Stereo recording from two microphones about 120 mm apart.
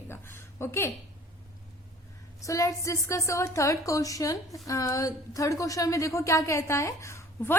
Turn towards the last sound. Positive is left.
turn(degrees=20)  # may be behind; listen again after turning